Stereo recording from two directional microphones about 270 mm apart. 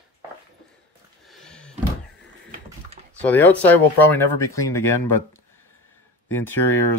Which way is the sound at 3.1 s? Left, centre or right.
Centre.